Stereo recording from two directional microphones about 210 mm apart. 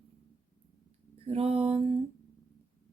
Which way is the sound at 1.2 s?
30° right (ahead or behind).